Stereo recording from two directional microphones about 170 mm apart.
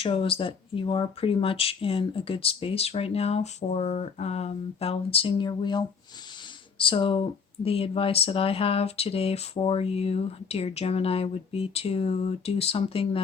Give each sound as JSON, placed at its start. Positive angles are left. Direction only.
{"t": 0.0, "sound": "speech", "side_deg": 30}